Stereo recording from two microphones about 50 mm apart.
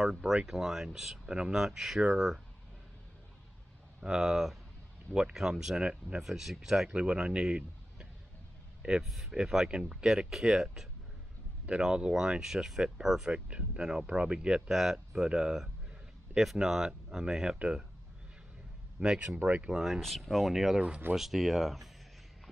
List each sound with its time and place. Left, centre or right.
0.0 s speech: centre
4.0 s speech: centre
6.2 s speech: centre
6.9 s speech: centre
9.0 s speech: centre
13.5 s speech: right
14.7 s speech: centre
18.9 s speech: right
19.7 s speech: centre